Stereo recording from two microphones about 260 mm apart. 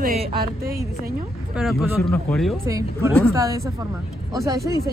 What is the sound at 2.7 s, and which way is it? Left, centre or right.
Speech, centre.